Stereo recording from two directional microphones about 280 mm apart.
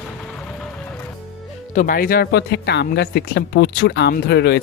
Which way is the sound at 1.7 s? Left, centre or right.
Left.